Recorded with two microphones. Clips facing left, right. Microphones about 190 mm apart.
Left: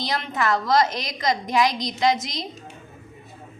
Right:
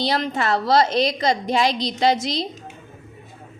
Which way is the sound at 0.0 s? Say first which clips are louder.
Right 3 dB; 30° right (ahead or behind).